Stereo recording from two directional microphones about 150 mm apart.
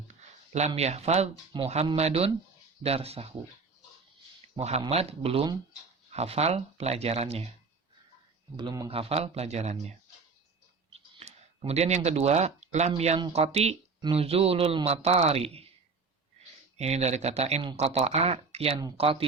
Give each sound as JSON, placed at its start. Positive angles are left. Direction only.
{"t": 0.1, "sound": "a sound", "side_deg": -50}
{"t": 0.8, "sound": "speech", "side_deg": -45}
{"t": 4.6, "sound": "a man's voice", "side_deg": -35}
{"t": 8.5, "sound": "speech", "side_deg": -25}
{"t": 8.9, "sound": "speech", "side_deg": -40}
{"t": 11.2, "sound": "a man's voice", "side_deg": -45}
{"t": 16.7, "sound": "a man's voice", "side_deg": -45}